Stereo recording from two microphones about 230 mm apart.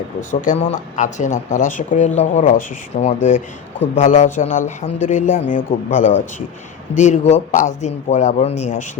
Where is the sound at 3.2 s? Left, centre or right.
Left.